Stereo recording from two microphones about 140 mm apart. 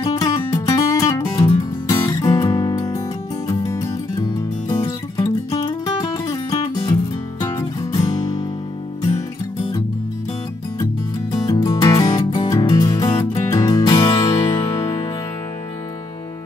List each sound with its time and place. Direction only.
0.0 s music: 25° left (ahead or behind)
7.3 s guitar: 25° left (ahead or behind)
11.3 s music: 30° left (ahead or behind)